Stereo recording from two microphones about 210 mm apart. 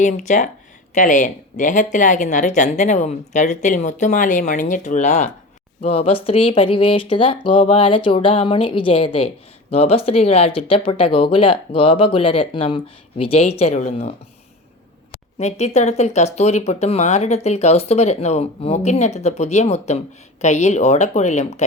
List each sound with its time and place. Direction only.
0.0 s speech: 35° left (ahead or behind)
15.4 s speech: 30° left (ahead or behind)